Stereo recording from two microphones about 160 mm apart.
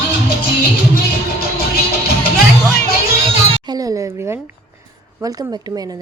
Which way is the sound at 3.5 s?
25° right (ahead or behind).